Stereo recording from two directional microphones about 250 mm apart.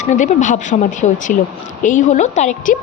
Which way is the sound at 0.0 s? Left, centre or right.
Left.